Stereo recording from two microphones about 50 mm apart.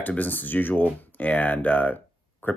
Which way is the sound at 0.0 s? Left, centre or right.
Left.